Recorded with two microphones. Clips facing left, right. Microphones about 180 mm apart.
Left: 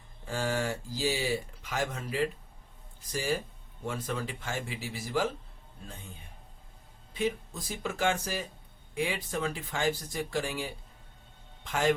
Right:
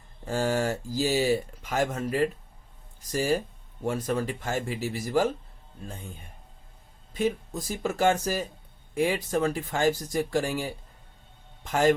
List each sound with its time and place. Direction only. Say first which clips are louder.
0.3 s speech: right 5 dB; 40° right (ahead or behind)
7.1 s speech: right 4 dB; 45° right (ahead or behind)